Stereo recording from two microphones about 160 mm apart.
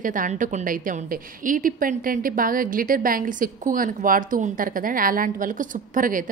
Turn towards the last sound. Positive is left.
turn(degrees=-55)  # may be behind; listen again after turning